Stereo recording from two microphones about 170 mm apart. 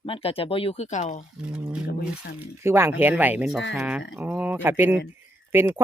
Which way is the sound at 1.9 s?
75° left (ahead or behind).